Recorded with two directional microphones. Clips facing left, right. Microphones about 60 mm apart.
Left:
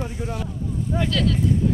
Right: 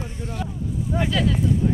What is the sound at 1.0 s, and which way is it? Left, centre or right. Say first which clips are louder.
Speech: even; centre.